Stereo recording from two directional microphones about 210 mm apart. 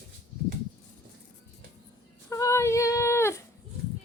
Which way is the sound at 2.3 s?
15° left (ahead or behind).